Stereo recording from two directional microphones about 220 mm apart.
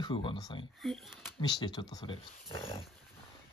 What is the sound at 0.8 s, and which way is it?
Speech, centre (ahead or behind).